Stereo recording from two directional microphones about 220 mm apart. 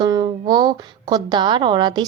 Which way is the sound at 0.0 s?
20° right (ahead or behind).